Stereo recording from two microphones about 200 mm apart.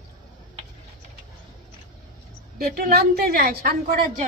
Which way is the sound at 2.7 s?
50° right (ahead or behind).